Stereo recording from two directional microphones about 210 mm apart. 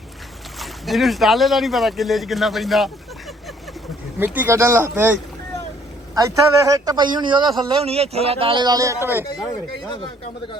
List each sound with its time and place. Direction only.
0.6 s speech: centre (ahead or behind)
4.2 s speech: 10° right (ahead or behind)
6.1 s speech: 15° right (ahead or behind)